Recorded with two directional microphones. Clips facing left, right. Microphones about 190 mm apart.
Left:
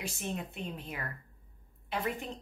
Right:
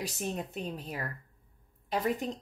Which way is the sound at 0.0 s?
40° right (ahead or behind).